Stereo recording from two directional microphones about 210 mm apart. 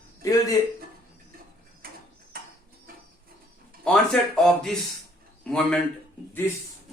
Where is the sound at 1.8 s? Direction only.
45° right (ahead or behind).